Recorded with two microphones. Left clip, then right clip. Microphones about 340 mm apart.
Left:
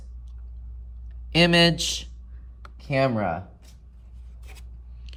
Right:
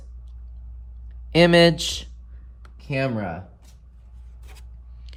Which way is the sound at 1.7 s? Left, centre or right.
Centre.